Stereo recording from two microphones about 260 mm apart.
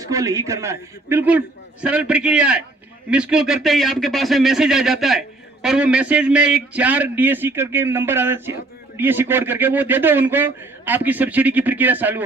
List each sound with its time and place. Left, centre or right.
0.1 s a man's voice: centre